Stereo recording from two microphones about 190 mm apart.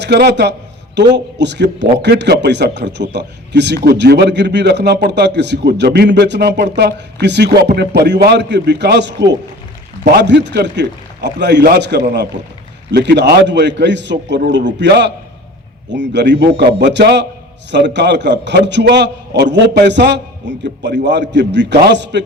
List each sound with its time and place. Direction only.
0.0 s a man's voice: 60° right (ahead or behind)